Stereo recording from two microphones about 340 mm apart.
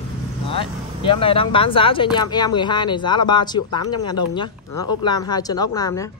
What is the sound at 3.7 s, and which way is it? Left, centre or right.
Speech, left.